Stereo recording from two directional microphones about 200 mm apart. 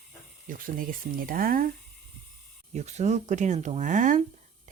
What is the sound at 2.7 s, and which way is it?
Speech, 35° right (ahead or behind).